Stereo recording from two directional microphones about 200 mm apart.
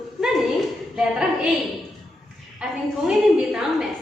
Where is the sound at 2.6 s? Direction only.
Centre (ahead or behind).